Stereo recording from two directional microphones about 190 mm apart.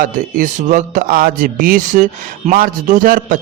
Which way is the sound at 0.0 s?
45° right (ahead or behind).